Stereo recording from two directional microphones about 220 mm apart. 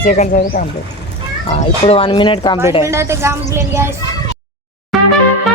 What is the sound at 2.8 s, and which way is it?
Speech, 10° right (ahead or behind).